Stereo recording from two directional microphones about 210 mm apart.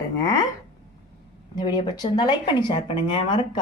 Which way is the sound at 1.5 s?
20° left (ahead or behind).